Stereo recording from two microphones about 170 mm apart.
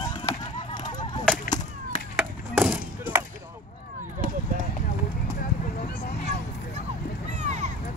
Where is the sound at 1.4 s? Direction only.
45° left (ahead or behind).